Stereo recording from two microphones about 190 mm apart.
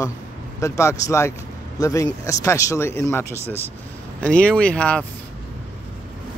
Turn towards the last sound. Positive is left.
turn(degrees=5)  # may be behind; listen again after turning